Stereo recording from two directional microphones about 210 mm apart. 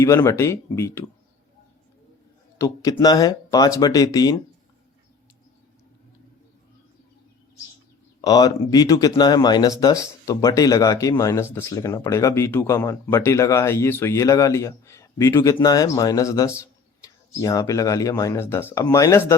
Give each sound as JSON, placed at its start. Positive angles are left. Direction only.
{"t": 0.0, "sound": "speech", "side_deg": 10}
{"t": 2.6, "sound": "speech", "side_deg": 15}
{"t": 8.2, "sound": "speech", "side_deg": 20}